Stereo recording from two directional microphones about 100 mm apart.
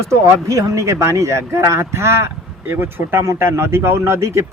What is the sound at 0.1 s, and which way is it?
Speech, 30° right (ahead or behind).